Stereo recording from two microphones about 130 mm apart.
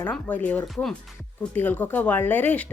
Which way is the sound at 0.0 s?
10° left (ahead or behind).